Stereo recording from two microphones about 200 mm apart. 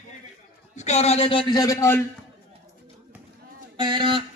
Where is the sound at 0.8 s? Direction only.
35° left (ahead or behind); by 1.9 s 15° left (ahead or behind).